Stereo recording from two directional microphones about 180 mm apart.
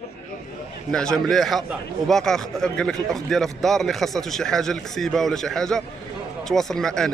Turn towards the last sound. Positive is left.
turn(degrees=5)  # may be behind; listen again after turning